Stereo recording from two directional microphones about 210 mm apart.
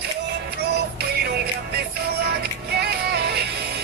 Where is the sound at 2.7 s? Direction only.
50° right (ahead or behind).